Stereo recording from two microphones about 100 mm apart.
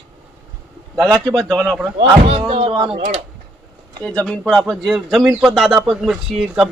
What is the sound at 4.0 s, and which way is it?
Speech, 10° left (ahead or behind).